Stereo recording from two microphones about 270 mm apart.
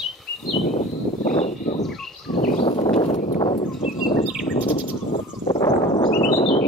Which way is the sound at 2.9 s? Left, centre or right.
Left.